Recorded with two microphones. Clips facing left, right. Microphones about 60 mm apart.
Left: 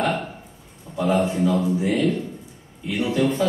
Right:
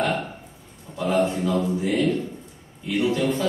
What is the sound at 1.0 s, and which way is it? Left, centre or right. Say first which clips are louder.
Speech: left 2 dB; centre.